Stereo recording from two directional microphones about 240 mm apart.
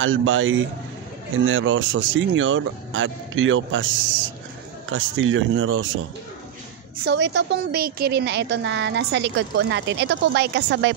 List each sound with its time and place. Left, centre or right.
0.0 s a woman's voice: right
7.1 s a woman's voice: right